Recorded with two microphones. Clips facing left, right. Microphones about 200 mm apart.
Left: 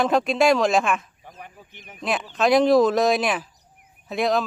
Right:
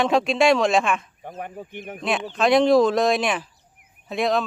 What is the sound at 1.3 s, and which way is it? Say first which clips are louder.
Speech: right 10 dB; 50° right (ahead or behind).